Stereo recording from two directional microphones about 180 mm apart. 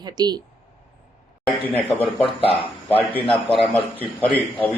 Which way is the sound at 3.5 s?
10° left (ahead or behind).